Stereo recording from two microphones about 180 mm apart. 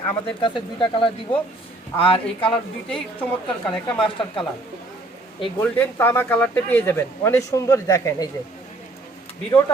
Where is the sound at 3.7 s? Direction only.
5° left (ahead or behind).